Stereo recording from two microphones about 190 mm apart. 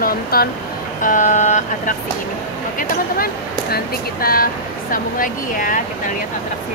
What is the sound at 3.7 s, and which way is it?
Speech, 50° left (ahead or behind).